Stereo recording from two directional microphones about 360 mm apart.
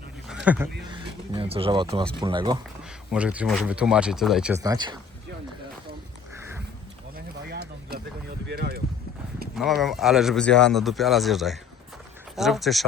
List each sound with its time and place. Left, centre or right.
0.4 s speech: centre
7.5 s a sound: right
8.4 s boat: right
9.8 s speech: centre